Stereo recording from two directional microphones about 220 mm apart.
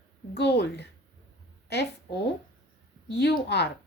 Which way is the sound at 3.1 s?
50° left (ahead or behind).